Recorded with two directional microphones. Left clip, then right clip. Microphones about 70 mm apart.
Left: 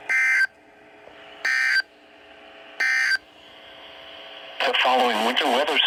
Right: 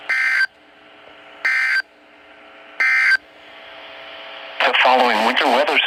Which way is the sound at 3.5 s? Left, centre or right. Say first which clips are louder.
Right 6 dB; right.